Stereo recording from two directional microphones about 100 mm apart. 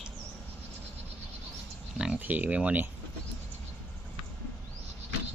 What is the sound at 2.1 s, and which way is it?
Speech, 15° right (ahead or behind).